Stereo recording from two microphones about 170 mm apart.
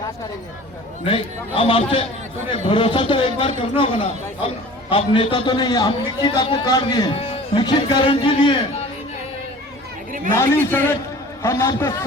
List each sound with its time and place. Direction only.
1.0 s a man's voice: 30° left (ahead or behind)
10.3 s a man's voice: 15° left (ahead or behind)